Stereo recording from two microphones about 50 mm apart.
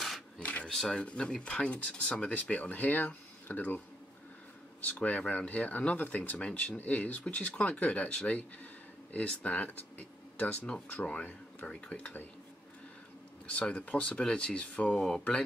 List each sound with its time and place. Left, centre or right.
0.4 s a sound: left
0.7 s speech: centre; by 3.8 s left
4.8 s speech: left
13.5 s speech: left